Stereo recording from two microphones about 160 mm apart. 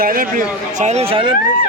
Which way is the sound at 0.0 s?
65° right (ahead or behind).